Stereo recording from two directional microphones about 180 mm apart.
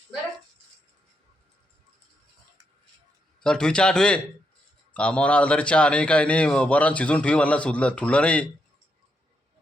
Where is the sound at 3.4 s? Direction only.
5° left (ahead or behind).